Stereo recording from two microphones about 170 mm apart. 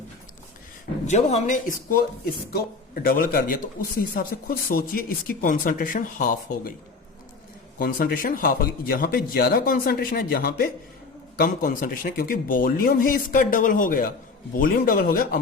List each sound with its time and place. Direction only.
1.0 s a man's voice: 40° left (ahead or behind)
7.8 s speech: 60° left (ahead or behind)
11.3 s speech: 55° left (ahead or behind)